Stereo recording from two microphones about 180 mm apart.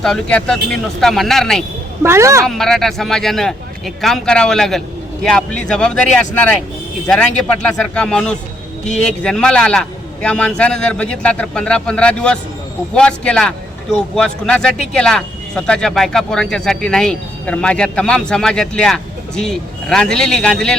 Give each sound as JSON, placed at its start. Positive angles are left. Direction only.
{"t": 0.0, "sound": "speech", "side_deg": 5}
{"t": 2.0, "sound": "a woman's voice", "side_deg": -15}
{"t": 2.5, "sound": "speech", "side_deg": 0}